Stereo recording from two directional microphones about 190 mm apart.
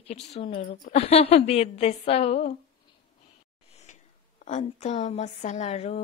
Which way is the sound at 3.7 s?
35° left (ahead or behind).